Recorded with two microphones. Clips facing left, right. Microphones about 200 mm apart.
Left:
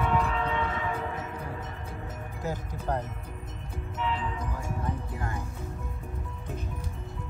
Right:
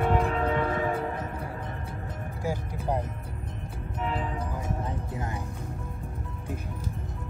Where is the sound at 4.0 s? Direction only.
45° right (ahead or behind).